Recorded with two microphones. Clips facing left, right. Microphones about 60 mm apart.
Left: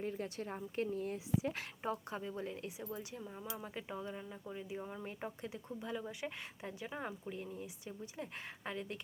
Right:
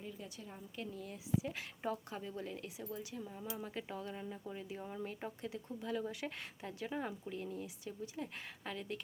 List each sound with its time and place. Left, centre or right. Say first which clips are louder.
0.0 s speech: left 8 dB; left
1.8 s a woman's voice: left 1 dB; left
3.2 s speech: right 1 dB; centre
4.1 s speech: right 1 dB; centre
5.4 s a woman's voice: right 1 dB; left